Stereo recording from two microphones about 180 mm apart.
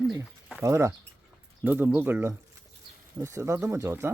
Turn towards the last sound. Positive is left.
turn(degrees=-15)  # may be behind; listen again after turning